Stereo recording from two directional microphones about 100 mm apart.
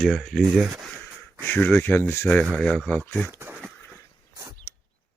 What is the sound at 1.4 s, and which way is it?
Speech, 20° left (ahead or behind).